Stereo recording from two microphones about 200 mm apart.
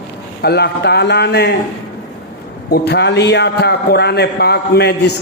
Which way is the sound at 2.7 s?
55° left (ahead or behind).